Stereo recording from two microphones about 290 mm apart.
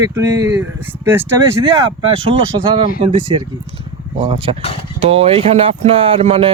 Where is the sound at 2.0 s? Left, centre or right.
Centre.